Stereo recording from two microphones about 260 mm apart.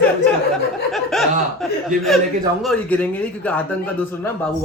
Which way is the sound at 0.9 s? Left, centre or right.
Centre.